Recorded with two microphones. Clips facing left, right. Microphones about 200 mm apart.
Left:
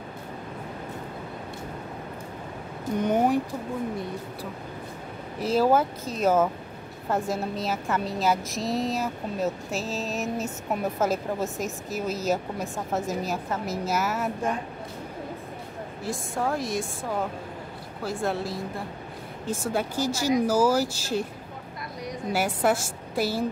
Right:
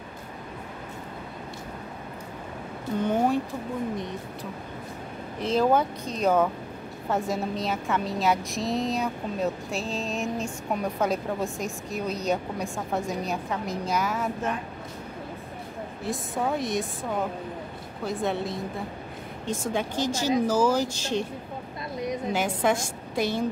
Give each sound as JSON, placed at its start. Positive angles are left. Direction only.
{"t": 3.0, "sound": "speech", "side_deg": 15}
{"t": 5.4, "sound": "a woman's voice", "side_deg": 5}
{"t": 16.0, "sound": "a woman's voice", "side_deg": 0}
{"t": 18.0, "sound": "a woman's voice", "side_deg": 0}
{"t": 19.7, "sound": "speech", "side_deg": 10}
{"t": 22.3, "sound": "speech", "side_deg": 5}